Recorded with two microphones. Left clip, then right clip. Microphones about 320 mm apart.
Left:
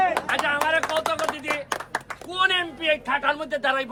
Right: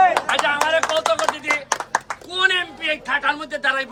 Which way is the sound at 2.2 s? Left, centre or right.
Centre.